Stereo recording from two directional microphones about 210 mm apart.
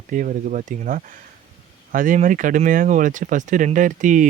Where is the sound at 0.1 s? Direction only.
40° right (ahead or behind).